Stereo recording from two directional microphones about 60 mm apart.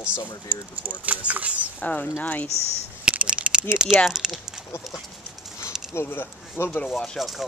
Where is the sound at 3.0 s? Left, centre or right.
Right.